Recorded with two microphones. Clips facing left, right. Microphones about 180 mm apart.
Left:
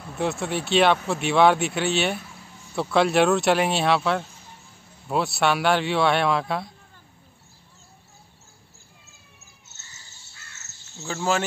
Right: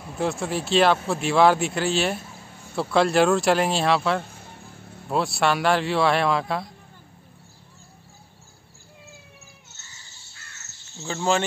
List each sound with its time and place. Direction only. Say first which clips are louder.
0.0 s speech: even; centre (ahead or behind)
4.3 s vehicle: right 5 dB; 55° right (ahead or behind)
5.0 s speech: even; centre (ahead or behind)
11.0 s speech: right 1 dB; 5° left (ahead or behind)